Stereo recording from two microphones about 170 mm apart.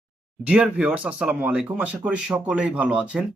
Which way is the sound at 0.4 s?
5° right (ahead or behind).